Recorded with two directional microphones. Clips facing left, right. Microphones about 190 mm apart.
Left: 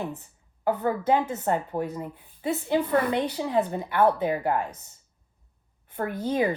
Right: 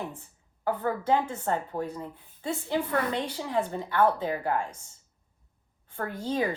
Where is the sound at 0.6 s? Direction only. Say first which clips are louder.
Left 4 dB; 20° left (ahead or behind).